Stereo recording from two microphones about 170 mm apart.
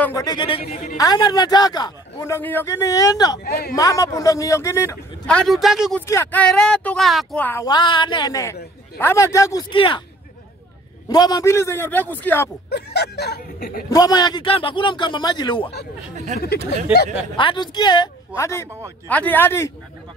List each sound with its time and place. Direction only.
0.0 s a man's voice: 20° left (ahead or behind); by 0.9 s 35° left (ahead or behind)
0.9 s a man's voice: 25° left (ahead or behind)
3.4 s speech: 65° left (ahead or behind)
3.7 s a man's voice: 20° left (ahead or behind)
5.2 s speech: 5° left (ahead or behind)
5.9 s a man's voice: 15° left (ahead or behind)
7.6 s a man's voice: 25° left (ahead or behind)
9.7 s speech: 30° left (ahead or behind)
11.1 s a man's voice: 25° left (ahead or behind)
12.6 s speech: 70° left (ahead or behind)
13.8 s a man's voice: 20° left (ahead or behind)
16.3 s speech: 45° right (ahead or behind)
17.4 s a man's voice: 30° left (ahead or behind)
18.3 s a man's voice: 15° left (ahead or behind)